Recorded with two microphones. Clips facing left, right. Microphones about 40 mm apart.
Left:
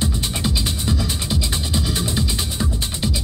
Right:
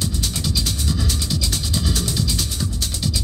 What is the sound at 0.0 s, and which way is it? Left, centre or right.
Music, left.